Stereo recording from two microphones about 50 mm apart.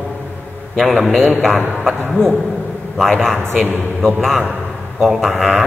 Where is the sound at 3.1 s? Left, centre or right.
Centre.